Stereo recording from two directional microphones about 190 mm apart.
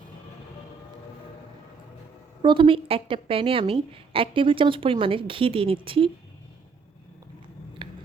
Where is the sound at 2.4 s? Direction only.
25° right (ahead or behind).